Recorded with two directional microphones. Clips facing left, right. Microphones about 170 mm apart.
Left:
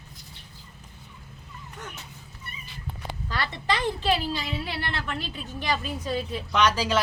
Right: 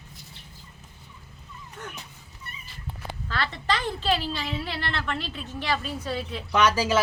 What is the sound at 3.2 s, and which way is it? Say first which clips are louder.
A woman's voice: even; 15° left (ahead or behind).